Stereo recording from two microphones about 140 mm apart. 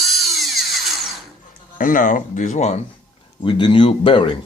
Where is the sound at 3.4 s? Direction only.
35° left (ahead or behind).